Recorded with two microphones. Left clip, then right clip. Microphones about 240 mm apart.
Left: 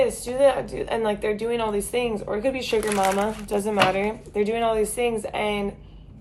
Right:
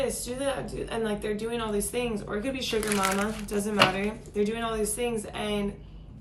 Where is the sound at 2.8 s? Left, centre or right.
Centre.